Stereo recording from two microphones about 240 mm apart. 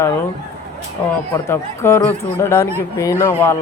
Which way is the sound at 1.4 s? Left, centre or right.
Centre.